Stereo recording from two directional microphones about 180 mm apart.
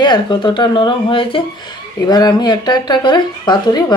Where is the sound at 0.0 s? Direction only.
25° left (ahead or behind).